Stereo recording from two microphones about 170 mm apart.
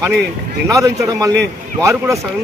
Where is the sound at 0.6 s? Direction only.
20° right (ahead or behind).